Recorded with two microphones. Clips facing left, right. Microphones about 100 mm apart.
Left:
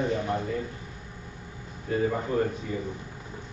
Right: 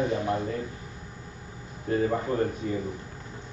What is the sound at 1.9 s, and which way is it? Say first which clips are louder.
Speech: right 2 dB; 40° right (ahead or behind).